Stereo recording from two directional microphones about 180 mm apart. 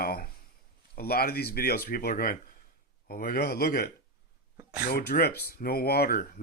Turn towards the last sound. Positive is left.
turn(degrees=55)  # may be behind; listen again after turning